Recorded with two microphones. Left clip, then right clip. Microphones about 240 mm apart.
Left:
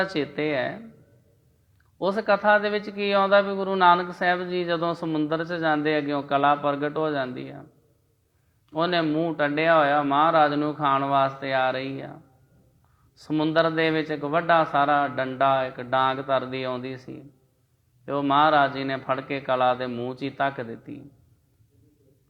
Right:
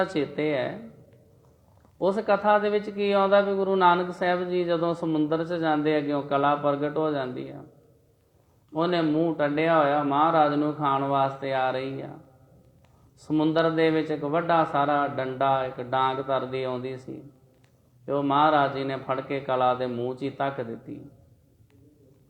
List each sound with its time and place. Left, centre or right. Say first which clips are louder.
0.0 s a man's voice: even; left
2.0 s a man's voice: left 1 dB; left
8.7 s speech: left 1 dB; left
13.1 s a man's voice: left 1 dB; left